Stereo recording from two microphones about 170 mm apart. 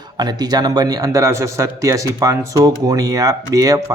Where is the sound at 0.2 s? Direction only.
25° right (ahead or behind).